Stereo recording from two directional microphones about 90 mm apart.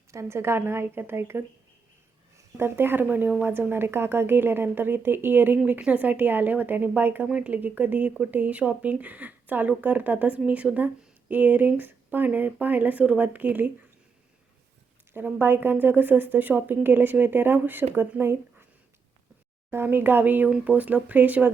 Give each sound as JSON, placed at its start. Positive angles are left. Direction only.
{"t": 0.1, "sound": "speech", "side_deg": -30}
{"t": 2.6, "sound": "speech", "side_deg": -25}
{"t": 15.1, "sound": "speech", "side_deg": -25}
{"t": 19.7, "sound": "speech", "side_deg": -25}